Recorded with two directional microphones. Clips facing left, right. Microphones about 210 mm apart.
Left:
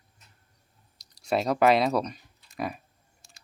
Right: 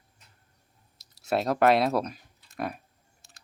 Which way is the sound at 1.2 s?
Centre (ahead or behind).